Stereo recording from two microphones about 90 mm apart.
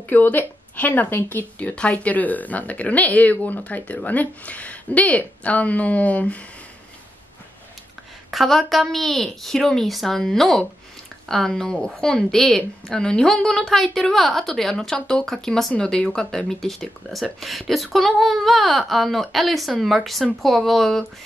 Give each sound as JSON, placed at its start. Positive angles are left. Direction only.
{"t": 0.1, "sound": "a woman's voice", "side_deg": 20}
{"t": 8.3, "sound": "a woman's voice", "side_deg": 0}